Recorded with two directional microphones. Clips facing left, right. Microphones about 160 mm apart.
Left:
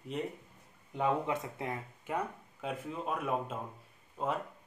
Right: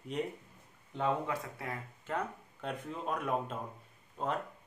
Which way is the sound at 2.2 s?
5° left (ahead or behind).